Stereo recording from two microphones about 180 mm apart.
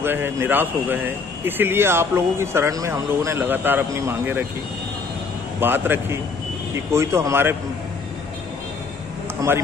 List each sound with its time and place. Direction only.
0.0 s speech: 10° right (ahead or behind)
5.6 s speech: 10° right (ahead or behind)
9.4 s a man's voice: 20° right (ahead or behind)